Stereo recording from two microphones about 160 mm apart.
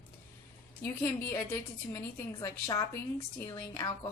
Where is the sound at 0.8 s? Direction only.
15° left (ahead or behind).